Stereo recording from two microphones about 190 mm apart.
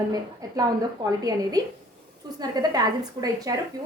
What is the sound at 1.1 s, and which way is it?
A woman's voice, 20° right (ahead or behind).